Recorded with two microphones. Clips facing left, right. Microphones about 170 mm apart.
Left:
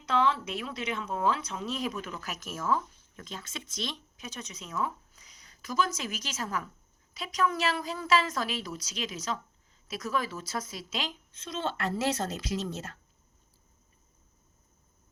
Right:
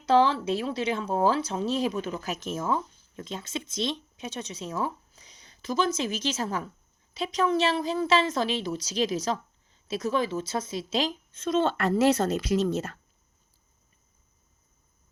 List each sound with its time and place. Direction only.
0.0 s a woman's voice: 30° right (ahead or behind); by 13.0 s 60° right (ahead or behind)